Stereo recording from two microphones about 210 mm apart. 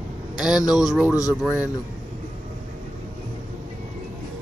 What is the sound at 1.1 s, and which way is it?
Speech, 15° left (ahead or behind).